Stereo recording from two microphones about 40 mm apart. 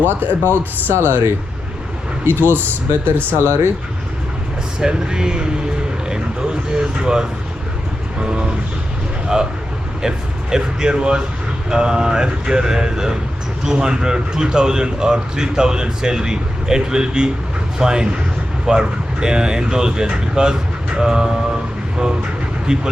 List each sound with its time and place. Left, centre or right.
0.5 s speech: right
2.2 s speech: right
3.3 s speech: right
4.8 s speech: centre
6.1 s a sound: centre
8.2 s speech: right
22.6 s speech: right